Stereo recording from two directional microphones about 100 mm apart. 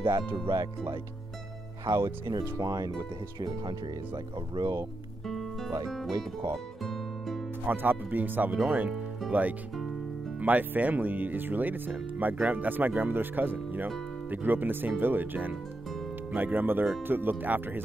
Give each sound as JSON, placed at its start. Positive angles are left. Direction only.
{"t": 0.3, "sound": "speech", "side_deg": -25}
{"t": 2.2, "sound": "speech", "side_deg": -35}
{"t": 5.2, "sound": "music", "side_deg": 0}
{"t": 5.9, "sound": "speech", "side_deg": 0}
{"t": 6.5, "sound": "music", "side_deg": 0}
{"t": 7.6, "sound": "speech", "side_deg": -20}